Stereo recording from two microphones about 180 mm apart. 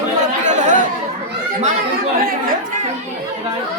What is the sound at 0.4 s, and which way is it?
Chatter, 40° right (ahead or behind).